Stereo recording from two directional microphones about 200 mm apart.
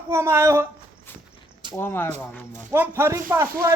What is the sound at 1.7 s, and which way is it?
Speech, 10° left (ahead or behind).